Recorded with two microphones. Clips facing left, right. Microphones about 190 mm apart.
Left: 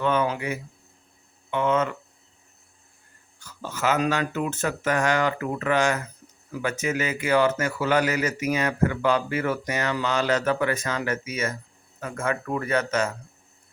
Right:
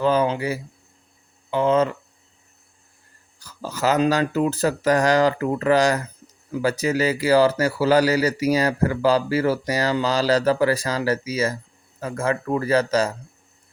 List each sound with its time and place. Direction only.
0.0 s speech: 35° right (ahead or behind)
3.4 s speech: 35° right (ahead or behind)